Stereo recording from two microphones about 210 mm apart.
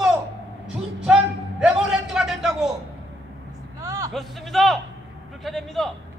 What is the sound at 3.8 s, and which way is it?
Vehicle, 15° right (ahead or behind).